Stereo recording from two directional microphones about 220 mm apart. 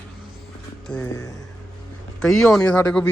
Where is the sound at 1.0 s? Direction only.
15° left (ahead or behind).